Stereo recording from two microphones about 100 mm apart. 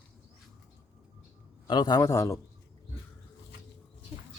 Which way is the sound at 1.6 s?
45° left (ahead or behind).